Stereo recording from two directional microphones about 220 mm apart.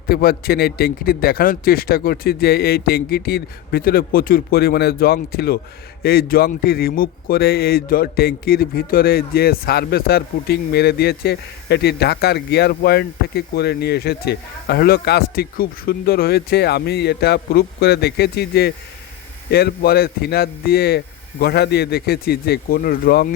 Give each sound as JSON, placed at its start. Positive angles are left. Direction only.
{"t": 0.1, "sound": "a man's voice", "side_deg": 45}